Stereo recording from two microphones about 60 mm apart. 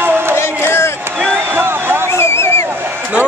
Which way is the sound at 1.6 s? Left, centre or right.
Right.